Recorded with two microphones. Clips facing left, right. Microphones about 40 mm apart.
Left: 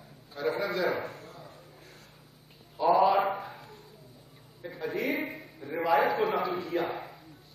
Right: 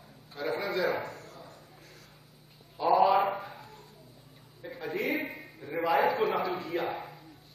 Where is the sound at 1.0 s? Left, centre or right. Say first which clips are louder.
Left 1 dB; left.